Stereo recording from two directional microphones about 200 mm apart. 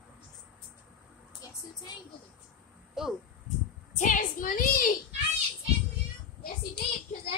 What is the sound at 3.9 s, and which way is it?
Speech, 40° left (ahead or behind).